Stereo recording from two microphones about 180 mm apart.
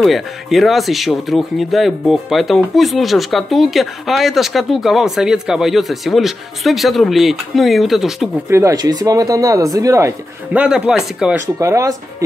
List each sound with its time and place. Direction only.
0.0 s speech: centre (ahead or behind)
8.5 s speech: 15° right (ahead or behind)
11.4 s speech: 15° right (ahead or behind)